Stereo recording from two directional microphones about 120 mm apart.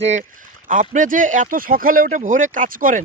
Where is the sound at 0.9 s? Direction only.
90° right.